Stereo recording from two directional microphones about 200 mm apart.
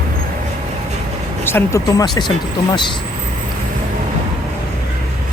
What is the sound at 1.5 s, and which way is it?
Speech, 10° left (ahead or behind).